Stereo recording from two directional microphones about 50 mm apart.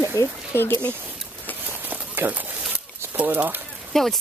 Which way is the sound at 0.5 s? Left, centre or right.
Left.